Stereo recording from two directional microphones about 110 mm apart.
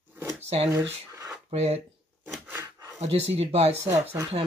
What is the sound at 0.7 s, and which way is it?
Speech, 30° right (ahead or behind).